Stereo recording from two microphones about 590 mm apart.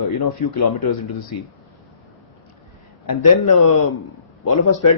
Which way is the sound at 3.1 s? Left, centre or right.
Left.